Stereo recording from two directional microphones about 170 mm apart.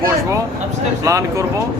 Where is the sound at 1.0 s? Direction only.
20° right (ahead or behind).